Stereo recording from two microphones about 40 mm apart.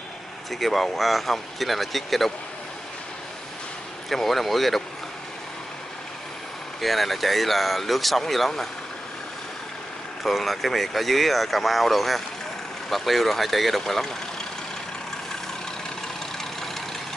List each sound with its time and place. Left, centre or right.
0.5 s speech: centre
4.1 s speech: centre
6.8 s speech: centre
10.2 s speech: centre